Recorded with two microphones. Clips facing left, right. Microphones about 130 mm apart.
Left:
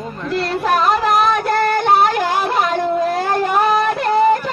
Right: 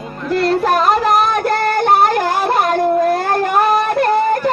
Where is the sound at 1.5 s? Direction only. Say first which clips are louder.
Right 1 dB; 45° right (ahead or behind).